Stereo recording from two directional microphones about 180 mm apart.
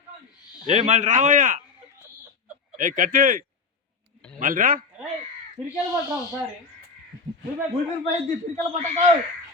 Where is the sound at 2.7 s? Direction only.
45° right (ahead or behind).